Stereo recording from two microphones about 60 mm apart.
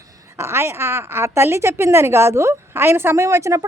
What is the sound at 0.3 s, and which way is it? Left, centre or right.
A woman's voice, right.